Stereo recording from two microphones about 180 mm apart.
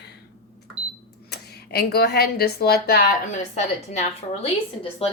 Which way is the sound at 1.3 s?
60° left (ahead or behind).